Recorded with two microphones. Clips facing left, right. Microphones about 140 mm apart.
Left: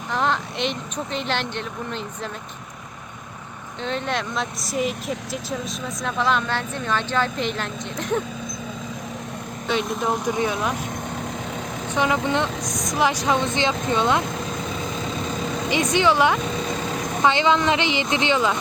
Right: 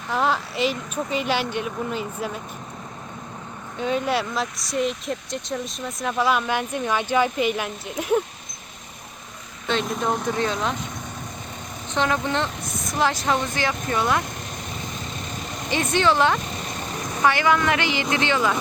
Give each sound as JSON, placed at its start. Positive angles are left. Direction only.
{"t": 0.1, "sound": "speech", "side_deg": -5}
{"t": 3.8, "sound": "speech", "side_deg": -10}
{"t": 9.6, "sound": "speech", "side_deg": 10}
{"t": 11.9, "sound": "speech", "side_deg": 10}
{"t": 15.7, "sound": "speech", "side_deg": 15}